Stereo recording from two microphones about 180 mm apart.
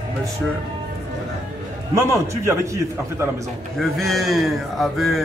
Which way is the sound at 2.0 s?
15° right (ahead or behind).